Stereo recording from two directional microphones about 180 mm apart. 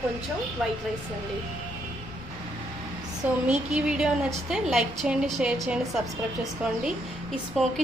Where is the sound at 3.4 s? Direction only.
5° right (ahead or behind).